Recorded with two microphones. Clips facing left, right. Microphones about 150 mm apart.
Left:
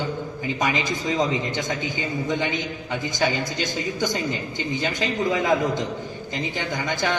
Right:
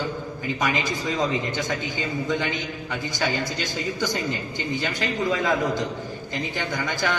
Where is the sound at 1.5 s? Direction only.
20° left (ahead or behind).